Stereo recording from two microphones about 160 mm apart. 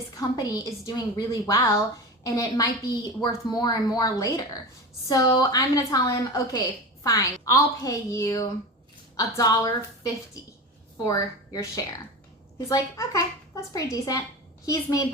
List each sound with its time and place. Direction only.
0.2 s a woman's voice: 20° left (ahead or behind)
10.9 s a woman's voice: 20° left (ahead or behind)
12.6 s a woman's voice: 20° left (ahead or behind)